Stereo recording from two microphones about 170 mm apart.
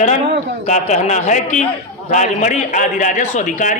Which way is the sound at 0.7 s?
45° left (ahead or behind).